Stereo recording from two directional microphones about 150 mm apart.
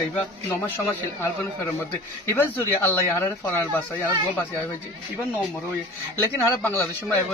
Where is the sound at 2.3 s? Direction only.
15° left (ahead or behind).